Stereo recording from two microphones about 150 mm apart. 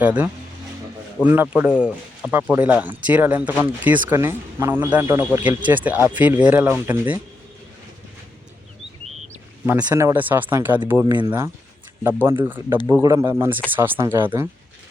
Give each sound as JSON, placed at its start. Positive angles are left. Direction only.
{"t": 0.0, "sound": "speech", "side_deg": -10}
{"t": 9.6, "sound": "speech", "side_deg": -15}
{"t": 11.1, "sound": "speech", "side_deg": -30}
{"t": 12.7, "sound": "speech", "side_deg": -20}